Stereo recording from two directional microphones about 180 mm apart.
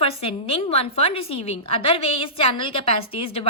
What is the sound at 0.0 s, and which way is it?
Speech, 35° left (ahead or behind).